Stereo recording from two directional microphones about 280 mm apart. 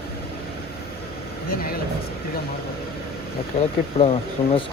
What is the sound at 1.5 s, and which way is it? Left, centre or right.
Vehicle, left.